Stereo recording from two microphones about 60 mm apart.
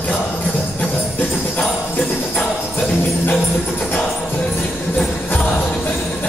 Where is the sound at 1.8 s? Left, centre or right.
Left.